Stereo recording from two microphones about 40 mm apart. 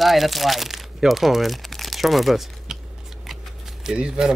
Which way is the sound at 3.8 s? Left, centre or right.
Centre.